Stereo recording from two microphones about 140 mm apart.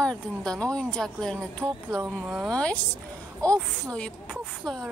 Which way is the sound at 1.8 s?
20° right (ahead or behind).